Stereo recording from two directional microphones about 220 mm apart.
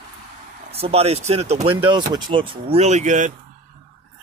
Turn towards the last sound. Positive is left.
turn(degrees=-35)  # may be behind; listen again after turning